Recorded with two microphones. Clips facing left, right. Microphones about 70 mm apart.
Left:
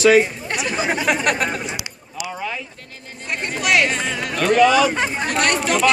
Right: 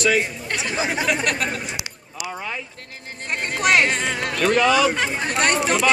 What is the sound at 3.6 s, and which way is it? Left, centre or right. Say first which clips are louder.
Music: even; right.